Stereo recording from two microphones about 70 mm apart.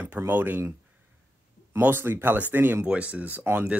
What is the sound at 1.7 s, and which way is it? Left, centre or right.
Speech, right.